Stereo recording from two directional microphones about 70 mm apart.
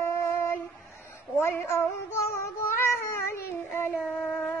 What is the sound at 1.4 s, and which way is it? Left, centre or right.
Cat, left.